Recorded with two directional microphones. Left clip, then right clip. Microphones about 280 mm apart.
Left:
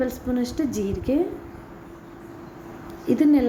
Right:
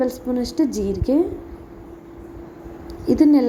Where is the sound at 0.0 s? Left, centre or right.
Centre.